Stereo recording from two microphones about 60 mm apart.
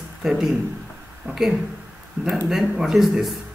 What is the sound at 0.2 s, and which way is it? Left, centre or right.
Speech, centre.